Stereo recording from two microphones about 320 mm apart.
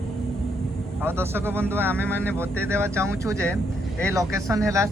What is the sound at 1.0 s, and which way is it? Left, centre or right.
Speech, centre.